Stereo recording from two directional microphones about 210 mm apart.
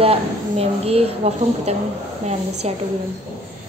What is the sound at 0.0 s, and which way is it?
A woman's voice, 30° right (ahead or behind).